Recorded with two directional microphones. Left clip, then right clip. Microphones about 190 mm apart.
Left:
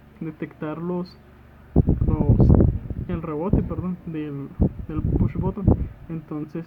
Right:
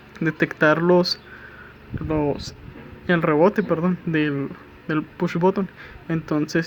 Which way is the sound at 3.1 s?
25° right (ahead or behind).